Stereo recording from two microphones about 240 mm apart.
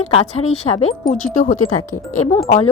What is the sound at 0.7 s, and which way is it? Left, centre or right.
Speech, left.